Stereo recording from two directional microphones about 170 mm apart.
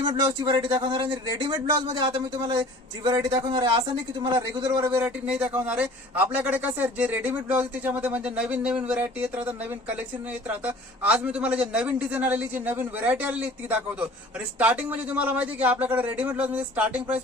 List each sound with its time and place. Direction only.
0.1 s a man's voice: 30° right (ahead or behind); by 9.3 s 10° right (ahead or behind)
10.5 s a man's voice: 10° right (ahead or behind)